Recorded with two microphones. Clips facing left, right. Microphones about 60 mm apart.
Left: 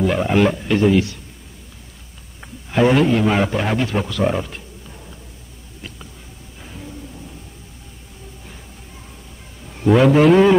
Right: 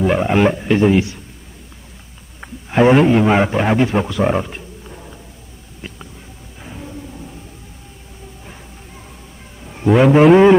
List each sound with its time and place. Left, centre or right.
0.0 s speech: centre
2.4 s a man's voice: right
5.8 s a sound: right
9.8 s speech: centre